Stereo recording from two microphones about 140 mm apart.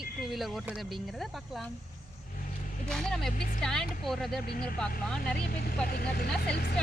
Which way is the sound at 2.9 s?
5° left (ahead or behind).